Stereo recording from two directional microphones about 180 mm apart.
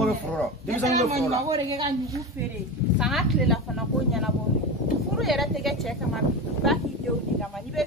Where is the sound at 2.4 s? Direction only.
15° right (ahead or behind).